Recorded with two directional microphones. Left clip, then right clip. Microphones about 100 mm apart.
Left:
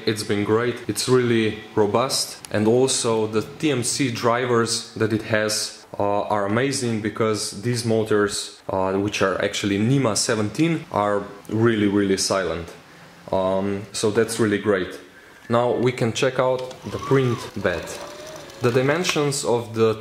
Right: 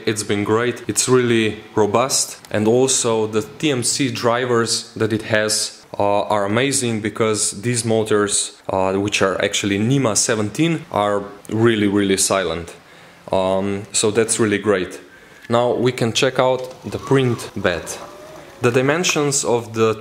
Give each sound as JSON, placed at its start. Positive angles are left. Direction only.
{"t": 0.0, "sound": "speech", "side_deg": -15}
{"t": 18.6, "sound": "speech", "side_deg": -20}